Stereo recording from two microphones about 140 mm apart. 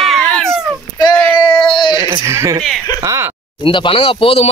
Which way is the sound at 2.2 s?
20° right (ahead or behind).